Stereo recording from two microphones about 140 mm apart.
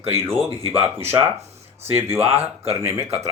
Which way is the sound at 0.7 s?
15° right (ahead or behind).